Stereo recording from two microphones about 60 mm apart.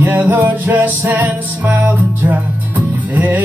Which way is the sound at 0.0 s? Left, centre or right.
Right.